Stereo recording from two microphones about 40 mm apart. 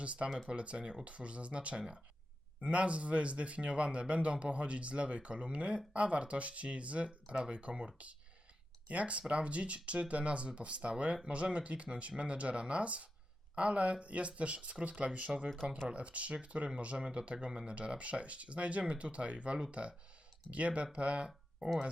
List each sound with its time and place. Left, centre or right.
0.0 s speech: right
0.3 s speech: centre
0.5 s speech: right